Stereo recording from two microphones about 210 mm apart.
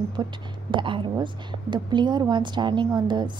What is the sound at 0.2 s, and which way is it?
A woman's voice, 20° right (ahead or behind).